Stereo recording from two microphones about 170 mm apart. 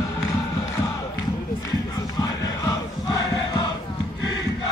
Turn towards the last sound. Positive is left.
turn(degrees=20)  # may be behind; listen again after turning